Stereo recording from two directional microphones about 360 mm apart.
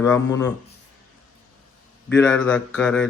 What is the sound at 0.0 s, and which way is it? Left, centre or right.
Speech, centre.